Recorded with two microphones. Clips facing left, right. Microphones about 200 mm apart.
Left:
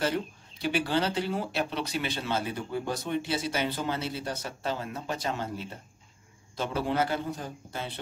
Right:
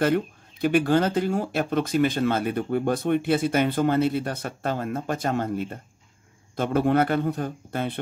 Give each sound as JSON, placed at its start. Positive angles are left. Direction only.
{"t": 0.0, "sound": "speech", "side_deg": -55}